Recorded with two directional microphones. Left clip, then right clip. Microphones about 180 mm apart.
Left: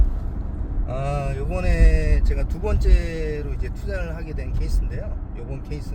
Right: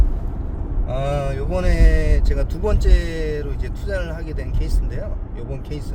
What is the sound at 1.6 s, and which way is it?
Speech, 20° right (ahead or behind).